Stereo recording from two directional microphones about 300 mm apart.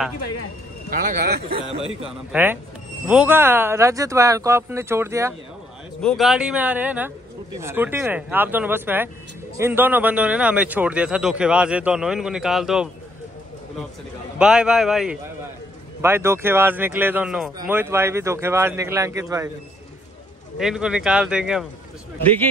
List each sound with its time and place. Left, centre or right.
0.8 s speech: right
2.0 s speech: centre
14.4 s speech: centre
20.5 s speech: centre